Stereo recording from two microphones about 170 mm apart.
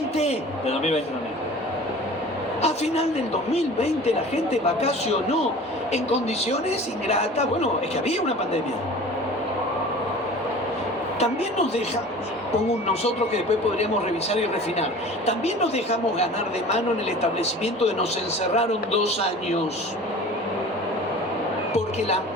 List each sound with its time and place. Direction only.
0.2 s speech: 40° left (ahead or behind)
2.6 s speech: 40° left (ahead or behind)
11.2 s speech: 40° left (ahead or behind)
17.6 s speech: 40° left (ahead or behind)